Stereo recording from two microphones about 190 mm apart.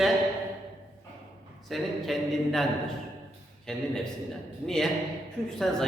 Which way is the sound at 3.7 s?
5° left (ahead or behind).